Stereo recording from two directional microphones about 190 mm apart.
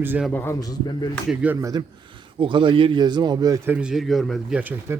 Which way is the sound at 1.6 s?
15° right (ahead or behind).